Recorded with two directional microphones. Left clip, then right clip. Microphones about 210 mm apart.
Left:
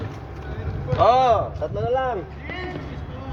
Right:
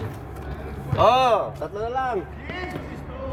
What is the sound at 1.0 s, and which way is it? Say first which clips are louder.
Speech: left 1 dB; 60° right (ahead or behind).